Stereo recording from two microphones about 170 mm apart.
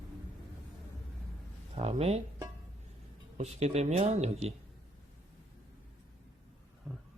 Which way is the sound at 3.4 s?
40° right (ahead or behind).